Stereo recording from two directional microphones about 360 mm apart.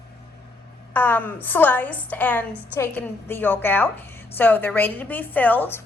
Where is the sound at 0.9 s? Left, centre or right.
Centre.